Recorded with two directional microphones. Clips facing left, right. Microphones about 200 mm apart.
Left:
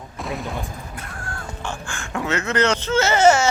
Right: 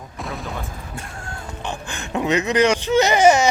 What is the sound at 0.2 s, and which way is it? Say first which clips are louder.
Fusillade: left 2 dB; centre (ahead or behind).